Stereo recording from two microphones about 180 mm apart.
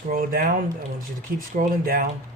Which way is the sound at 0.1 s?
55° right (ahead or behind).